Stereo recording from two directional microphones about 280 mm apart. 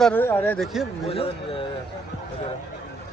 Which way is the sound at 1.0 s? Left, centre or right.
Centre.